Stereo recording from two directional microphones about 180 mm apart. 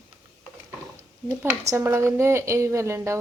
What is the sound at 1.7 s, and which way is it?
A woman's voice, 15° right (ahead or behind).